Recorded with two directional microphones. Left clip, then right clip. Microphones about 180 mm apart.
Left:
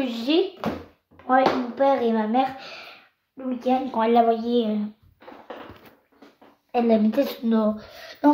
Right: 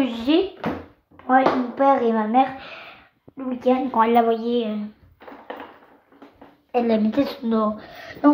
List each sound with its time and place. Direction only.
0.0 s speech: 5° right (ahead or behind)
2.6 s speech: 5° left (ahead or behind)
3.4 s speech: 15° right (ahead or behind)
4.0 s a woman's voice: centre (ahead or behind)
4.5 s a child's voice: 20° left (ahead or behind)
6.7 s a woman's voice: 5° right (ahead or behind)
7.1 s speech: 10° left (ahead or behind)